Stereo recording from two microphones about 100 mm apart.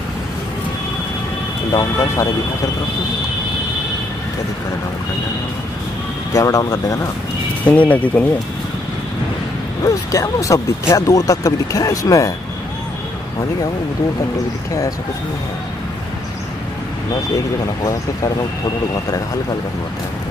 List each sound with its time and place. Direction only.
1.7 s speech: 35° left (ahead or behind)
6.3 s speech: 35° left (ahead or behind)
7.6 s speech: 15° left (ahead or behind)
9.8 s speech: 35° left (ahead or behind)